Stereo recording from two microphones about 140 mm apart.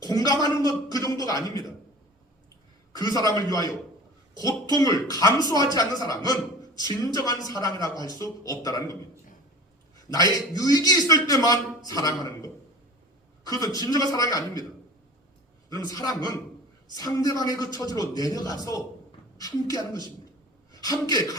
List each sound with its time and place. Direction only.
0.0 s a sound: 25° left (ahead or behind)
2.9 s a man's voice: 25° left (ahead or behind)
10.3 s a man's voice: 25° left (ahead or behind)
16.0 s a man's voice: 25° left (ahead or behind)